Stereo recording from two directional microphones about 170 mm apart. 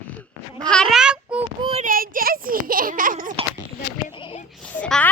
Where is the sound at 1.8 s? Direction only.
55° right (ahead or behind).